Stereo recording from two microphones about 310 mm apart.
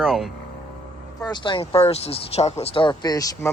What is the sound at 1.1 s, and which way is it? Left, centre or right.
Speech, centre.